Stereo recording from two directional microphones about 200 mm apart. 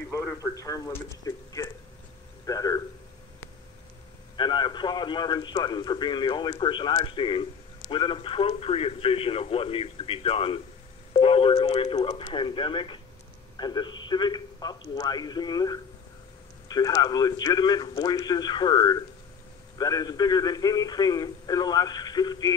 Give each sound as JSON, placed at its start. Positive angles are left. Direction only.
{"t": 0.1, "sound": "a man's voice", "side_deg": 5}
{"t": 4.4, "sound": "a man's voice", "side_deg": 20}